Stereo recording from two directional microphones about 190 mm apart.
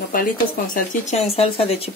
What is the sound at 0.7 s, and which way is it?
Speech, 35° left (ahead or behind).